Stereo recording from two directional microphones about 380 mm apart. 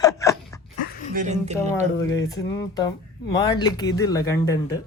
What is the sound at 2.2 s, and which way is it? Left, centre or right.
Speech, centre.